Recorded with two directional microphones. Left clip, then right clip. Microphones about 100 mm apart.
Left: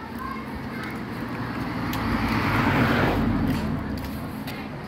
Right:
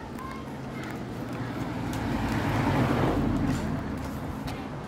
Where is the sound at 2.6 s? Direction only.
40° left (ahead or behind).